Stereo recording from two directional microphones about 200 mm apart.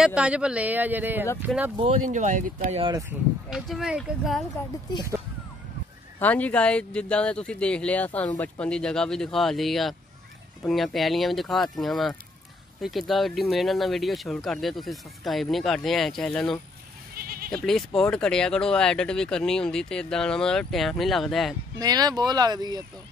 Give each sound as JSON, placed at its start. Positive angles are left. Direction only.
{"t": 0.0, "sound": "speech", "side_deg": -5}
{"t": 1.8, "sound": "speech", "side_deg": -35}
{"t": 2.8, "sound": "speech", "side_deg": -15}
{"t": 3.4, "sound": "speech", "side_deg": 0}
{"t": 6.1, "sound": "speech", "side_deg": 10}
{"t": 17.1, "sound": "goat", "side_deg": -45}
{"t": 17.6, "sound": "speech", "side_deg": 0}
{"t": 21.7, "sound": "speech", "side_deg": -20}